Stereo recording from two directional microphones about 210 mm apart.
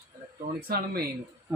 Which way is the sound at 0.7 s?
50° right (ahead or behind).